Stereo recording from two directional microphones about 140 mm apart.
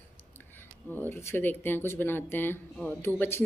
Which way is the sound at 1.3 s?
15° left (ahead or behind).